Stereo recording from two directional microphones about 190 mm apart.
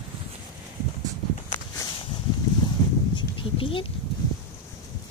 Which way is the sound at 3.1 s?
25° left (ahead or behind).